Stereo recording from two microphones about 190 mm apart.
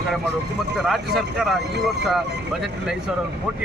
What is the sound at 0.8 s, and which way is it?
Speech, centre (ahead or behind).